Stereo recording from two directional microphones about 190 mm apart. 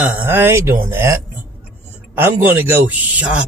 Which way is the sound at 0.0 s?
10° right (ahead or behind).